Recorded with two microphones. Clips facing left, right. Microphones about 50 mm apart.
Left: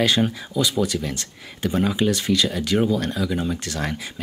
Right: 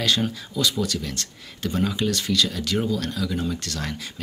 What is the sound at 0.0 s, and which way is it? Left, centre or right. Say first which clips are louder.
Speech: left 4 dB; centre.